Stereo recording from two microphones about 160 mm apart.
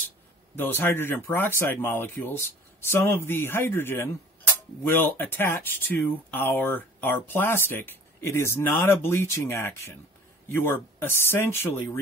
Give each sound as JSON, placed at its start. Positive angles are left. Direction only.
{"t": 0.6, "sound": "speech", "side_deg": 15}